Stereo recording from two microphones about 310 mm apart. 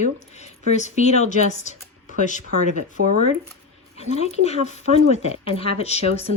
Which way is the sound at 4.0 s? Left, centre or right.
Left.